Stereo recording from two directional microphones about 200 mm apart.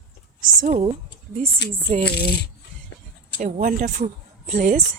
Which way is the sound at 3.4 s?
45° right (ahead or behind).